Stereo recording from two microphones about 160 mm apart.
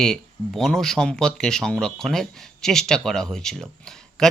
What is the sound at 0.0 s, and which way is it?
Speech, 5° left (ahead or behind).